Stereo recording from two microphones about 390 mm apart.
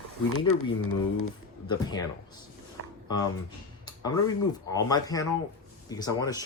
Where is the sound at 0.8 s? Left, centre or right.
Left.